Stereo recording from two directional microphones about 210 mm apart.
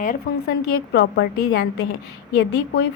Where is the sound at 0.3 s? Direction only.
45° left (ahead or behind).